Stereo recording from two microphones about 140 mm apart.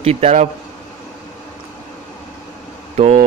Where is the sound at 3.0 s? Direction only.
50° right (ahead or behind).